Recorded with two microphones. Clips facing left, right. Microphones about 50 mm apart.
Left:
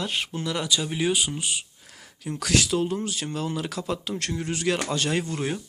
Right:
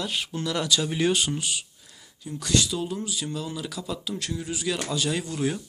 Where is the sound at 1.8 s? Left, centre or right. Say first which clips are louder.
Left 5 dB; left.